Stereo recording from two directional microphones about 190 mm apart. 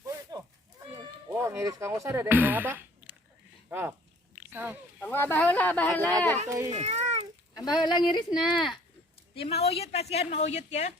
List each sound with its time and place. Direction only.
0.0 s a sound: 20° right (ahead or behind)
0.9 s speech: 15° right (ahead or behind)
4.9 s speech: 10° left (ahead or behind)
6.5 s speech: 15° right (ahead or behind)
6.7 s a sound: 35° right (ahead or behind)
7.5 s a woman's voice: 20° left (ahead or behind)